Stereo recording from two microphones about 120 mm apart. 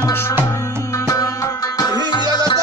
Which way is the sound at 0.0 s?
25° left (ahead or behind).